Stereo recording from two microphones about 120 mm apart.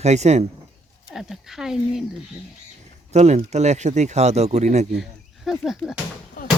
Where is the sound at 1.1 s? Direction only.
5° right (ahead or behind).